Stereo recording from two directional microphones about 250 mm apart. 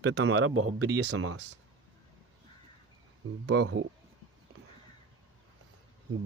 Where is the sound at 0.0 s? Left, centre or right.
Right.